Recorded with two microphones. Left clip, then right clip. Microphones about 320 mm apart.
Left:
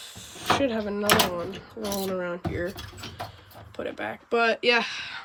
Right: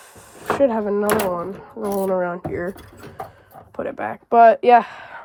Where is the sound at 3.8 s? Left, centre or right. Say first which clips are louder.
Right 6 dB; centre.